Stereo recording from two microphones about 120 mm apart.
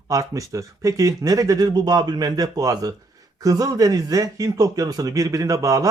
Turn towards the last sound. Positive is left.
turn(degrees=-30)  # may be behind; listen again after turning